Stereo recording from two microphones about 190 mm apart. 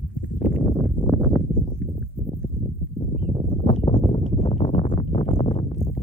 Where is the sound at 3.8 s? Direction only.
35° left (ahead or behind).